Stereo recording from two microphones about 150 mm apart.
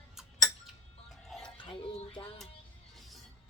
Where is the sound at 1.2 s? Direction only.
5° left (ahead or behind).